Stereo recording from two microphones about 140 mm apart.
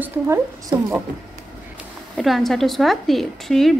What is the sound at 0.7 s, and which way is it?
Speech, 20° right (ahead or behind).